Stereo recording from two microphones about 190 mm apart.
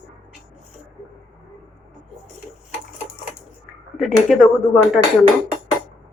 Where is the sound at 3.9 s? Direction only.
Centre (ahead or behind).